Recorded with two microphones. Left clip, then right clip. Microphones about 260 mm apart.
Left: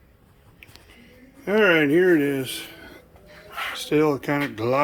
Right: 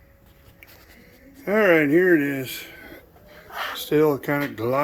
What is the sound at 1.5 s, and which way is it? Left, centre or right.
Speech, centre.